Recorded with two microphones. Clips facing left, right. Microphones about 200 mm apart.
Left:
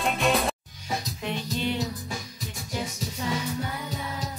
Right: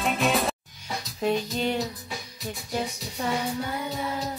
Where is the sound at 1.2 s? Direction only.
40° right (ahead or behind).